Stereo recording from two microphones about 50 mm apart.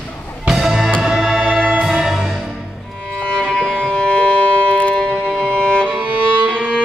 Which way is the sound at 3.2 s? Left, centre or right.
Centre.